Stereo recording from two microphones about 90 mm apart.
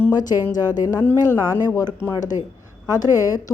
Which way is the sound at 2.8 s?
45° left (ahead or behind).